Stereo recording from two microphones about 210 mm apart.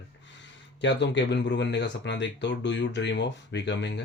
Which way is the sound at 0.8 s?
55° left (ahead or behind).